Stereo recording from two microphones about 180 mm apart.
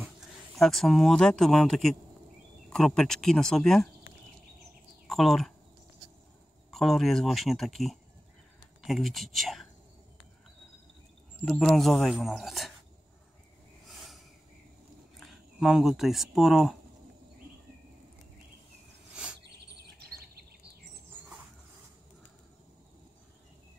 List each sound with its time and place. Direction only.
0.6 s speech: centre (ahead or behind)
5.0 s speech: centre (ahead or behind)
6.7 s speech: centre (ahead or behind)
11.4 s speech: centre (ahead or behind)
13.8 s a sound: centre (ahead or behind)
15.1 s speech: centre (ahead or behind)
20.1 s a sound: 60° right (ahead or behind)